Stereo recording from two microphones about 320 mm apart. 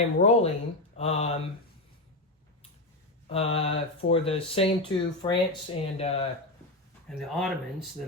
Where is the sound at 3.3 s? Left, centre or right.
Centre.